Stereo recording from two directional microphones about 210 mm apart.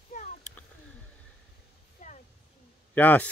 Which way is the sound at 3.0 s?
10° left (ahead or behind).